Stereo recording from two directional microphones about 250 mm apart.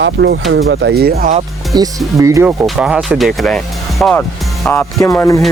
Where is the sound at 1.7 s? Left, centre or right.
Centre.